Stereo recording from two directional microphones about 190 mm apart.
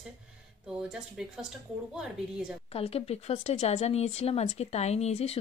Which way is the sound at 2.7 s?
30° left (ahead or behind).